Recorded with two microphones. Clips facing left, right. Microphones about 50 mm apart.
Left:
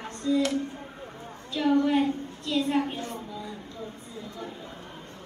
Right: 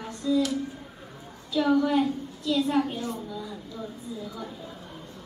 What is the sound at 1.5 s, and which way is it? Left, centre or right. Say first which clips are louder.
A woman's voice: right 1 dB; left.